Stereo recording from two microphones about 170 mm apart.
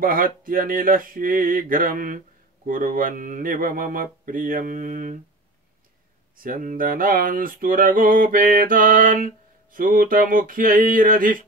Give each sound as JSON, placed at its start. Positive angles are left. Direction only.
{"t": 0.0, "sound": "speech", "side_deg": -55}
{"t": 6.3, "sound": "speech", "side_deg": -55}